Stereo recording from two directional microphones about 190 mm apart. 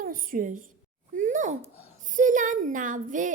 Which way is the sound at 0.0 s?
45° right (ahead or behind).